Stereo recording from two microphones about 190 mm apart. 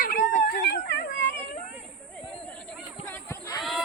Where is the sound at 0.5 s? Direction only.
60° left (ahead or behind).